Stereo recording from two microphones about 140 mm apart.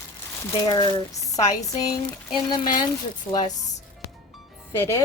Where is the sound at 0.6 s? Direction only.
30° left (ahead or behind).